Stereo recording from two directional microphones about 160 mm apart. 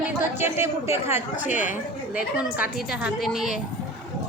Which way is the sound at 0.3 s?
15° right (ahead or behind).